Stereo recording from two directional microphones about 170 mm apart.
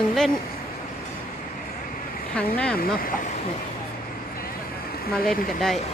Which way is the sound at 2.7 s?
60° left (ahead or behind).